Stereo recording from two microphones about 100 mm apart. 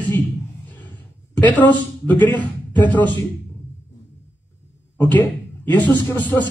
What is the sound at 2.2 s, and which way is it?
Speech, 15° left (ahead or behind).